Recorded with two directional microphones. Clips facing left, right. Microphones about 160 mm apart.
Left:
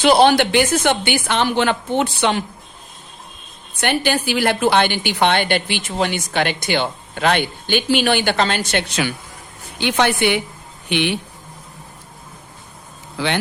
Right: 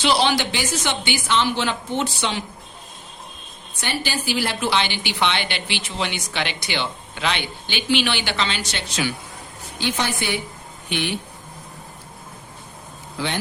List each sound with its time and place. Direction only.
0.0 s a woman's voice: 50° left (ahead or behind)
3.8 s a woman's voice: 60° left (ahead or behind)
9.8 s a woman's voice: 65° left (ahead or behind)
13.1 s speech: 80° left